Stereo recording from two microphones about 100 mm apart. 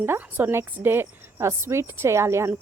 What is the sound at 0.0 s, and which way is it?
A woman's voice, 20° right (ahead or behind).